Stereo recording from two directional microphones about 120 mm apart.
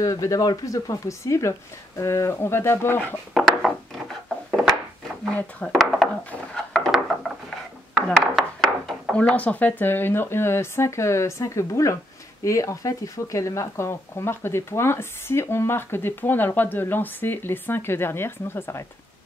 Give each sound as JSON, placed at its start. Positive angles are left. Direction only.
{"t": 0.0, "sound": "speech", "side_deg": 25}
{"t": 3.3, "sound": "a sound", "side_deg": 0}
{"t": 5.3, "sound": "speech", "side_deg": 5}
{"t": 6.5, "sound": "wood", "side_deg": 5}
{"t": 8.1, "sound": "chopping", "side_deg": 0}
{"t": 9.1, "sound": "speech", "side_deg": 10}